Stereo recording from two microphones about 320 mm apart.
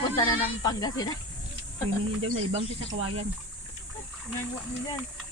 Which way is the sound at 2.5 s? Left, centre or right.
Centre.